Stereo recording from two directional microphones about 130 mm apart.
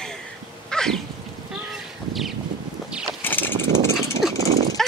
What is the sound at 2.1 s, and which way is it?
Wind, centre (ahead or behind).